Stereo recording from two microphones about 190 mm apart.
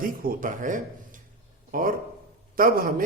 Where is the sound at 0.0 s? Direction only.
50° right (ahead or behind).